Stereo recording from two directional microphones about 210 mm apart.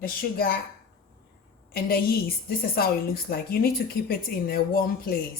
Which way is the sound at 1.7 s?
45° left (ahead or behind).